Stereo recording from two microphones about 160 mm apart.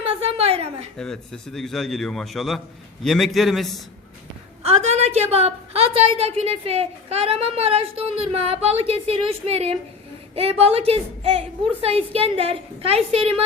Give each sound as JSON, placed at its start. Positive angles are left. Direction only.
{"t": 0.0, "sound": "a sound", "side_deg": -35}
{"t": 0.9, "sound": "a man's voice", "side_deg": 5}
{"t": 4.6, "sound": "a woman's voice", "side_deg": -40}